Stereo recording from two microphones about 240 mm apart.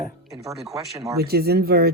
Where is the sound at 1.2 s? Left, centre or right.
Right.